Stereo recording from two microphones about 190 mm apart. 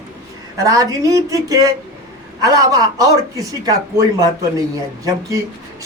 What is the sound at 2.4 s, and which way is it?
A man's voice, 20° right (ahead or behind).